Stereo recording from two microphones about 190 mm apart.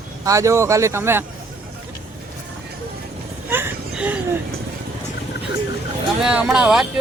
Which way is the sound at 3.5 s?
10° right (ahead or behind).